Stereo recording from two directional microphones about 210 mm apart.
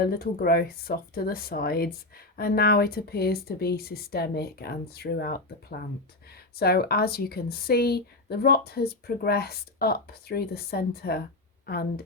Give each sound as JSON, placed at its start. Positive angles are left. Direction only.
{"t": 0.0, "sound": "a woman's voice", "side_deg": 45}